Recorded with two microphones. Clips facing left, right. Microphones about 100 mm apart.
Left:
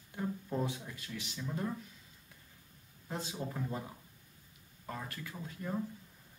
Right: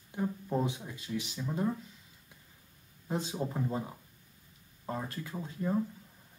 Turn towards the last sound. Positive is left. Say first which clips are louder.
# right 7 dB
turn(degrees=-25)  # may be behind; listen again after turning